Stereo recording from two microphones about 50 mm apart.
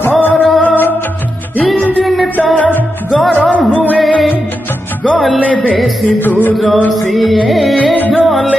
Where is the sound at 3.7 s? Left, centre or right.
Left.